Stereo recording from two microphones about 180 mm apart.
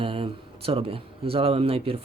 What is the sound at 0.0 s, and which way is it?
Speech, 30° right (ahead or behind).